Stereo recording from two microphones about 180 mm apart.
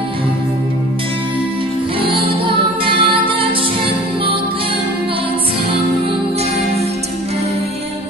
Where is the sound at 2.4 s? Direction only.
30° right (ahead or behind).